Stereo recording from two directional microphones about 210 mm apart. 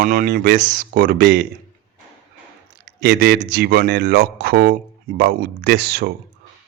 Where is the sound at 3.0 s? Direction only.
45° right (ahead or behind).